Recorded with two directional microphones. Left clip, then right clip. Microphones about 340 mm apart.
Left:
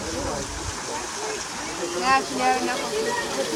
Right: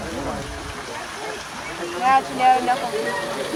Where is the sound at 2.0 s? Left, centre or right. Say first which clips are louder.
Right 5 dB; right.